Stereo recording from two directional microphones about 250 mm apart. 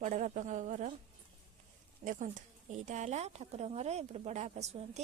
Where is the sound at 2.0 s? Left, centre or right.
Right.